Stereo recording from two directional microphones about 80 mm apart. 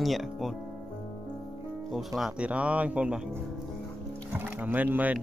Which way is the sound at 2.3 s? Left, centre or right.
Centre.